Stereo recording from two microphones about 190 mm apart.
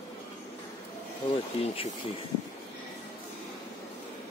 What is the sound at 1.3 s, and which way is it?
Speech, 30° left (ahead or behind).